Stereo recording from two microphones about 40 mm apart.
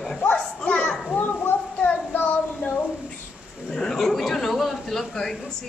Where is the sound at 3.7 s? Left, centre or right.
Centre.